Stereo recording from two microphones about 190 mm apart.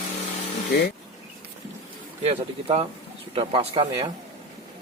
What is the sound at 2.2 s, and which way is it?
Speech, 35° right (ahead or behind).